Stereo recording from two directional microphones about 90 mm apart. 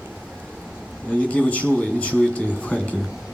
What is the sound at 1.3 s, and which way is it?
Speech, 15° left (ahead or behind).